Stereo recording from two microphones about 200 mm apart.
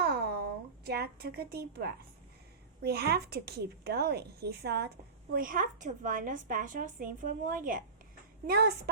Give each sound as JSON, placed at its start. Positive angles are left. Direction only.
{"t": 0.0, "sound": "a sound", "side_deg": -50}
{"t": 0.9, "sound": "a woman's voice", "side_deg": -50}
{"t": 8.4, "sound": "a woman's voice", "side_deg": -50}